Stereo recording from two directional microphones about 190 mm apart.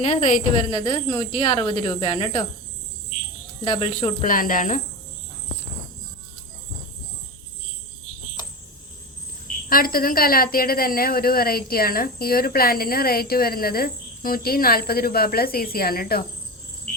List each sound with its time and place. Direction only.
0.7 s speech: 25° left (ahead or behind)
3.6 s speech: 30° left (ahead or behind)
9.6 s a woman's voice: 50° left (ahead or behind)